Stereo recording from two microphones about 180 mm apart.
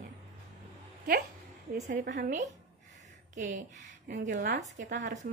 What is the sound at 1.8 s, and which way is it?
Speech, 50° right (ahead or behind).